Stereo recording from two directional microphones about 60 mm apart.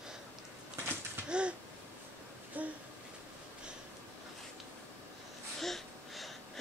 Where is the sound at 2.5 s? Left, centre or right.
Right.